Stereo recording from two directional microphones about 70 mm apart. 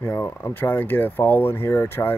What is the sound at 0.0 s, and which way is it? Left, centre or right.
Speech, left.